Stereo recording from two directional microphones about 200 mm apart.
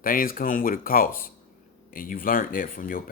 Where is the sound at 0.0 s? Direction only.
45° left (ahead or behind).